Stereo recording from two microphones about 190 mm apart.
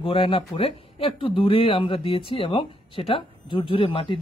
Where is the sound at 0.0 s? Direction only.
25° left (ahead or behind).